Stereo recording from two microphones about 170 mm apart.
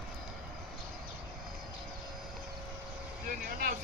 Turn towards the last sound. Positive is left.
turn(degrees=-55)  # may be behind; listen again after turning